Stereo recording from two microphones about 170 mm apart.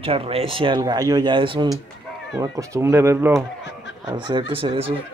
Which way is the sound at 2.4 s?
15° right (ahead or behind).